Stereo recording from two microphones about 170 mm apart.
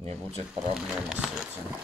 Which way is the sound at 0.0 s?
40° right (ahead or behind).